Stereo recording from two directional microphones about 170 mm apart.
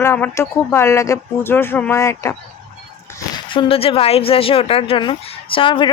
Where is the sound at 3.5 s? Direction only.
35° left (ahead or behind).